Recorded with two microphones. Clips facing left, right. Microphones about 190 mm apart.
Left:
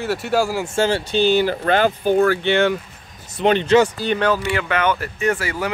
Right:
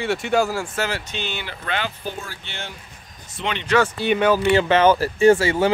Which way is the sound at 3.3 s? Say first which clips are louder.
Left 10 dB; 40° left (ahead or behind).